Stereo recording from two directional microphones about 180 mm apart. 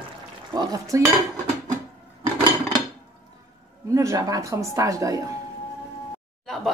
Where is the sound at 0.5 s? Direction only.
20° right (ahead or behind).